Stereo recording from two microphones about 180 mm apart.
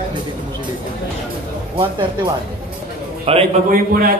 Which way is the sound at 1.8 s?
25° right (ahead or behind).